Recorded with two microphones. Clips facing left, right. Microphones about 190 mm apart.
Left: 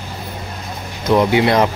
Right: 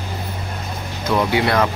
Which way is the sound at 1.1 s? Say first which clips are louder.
Left 4 dB; 20° left (ahead or behind).